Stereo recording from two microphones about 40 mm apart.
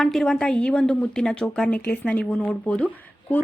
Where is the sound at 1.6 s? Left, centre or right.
Left.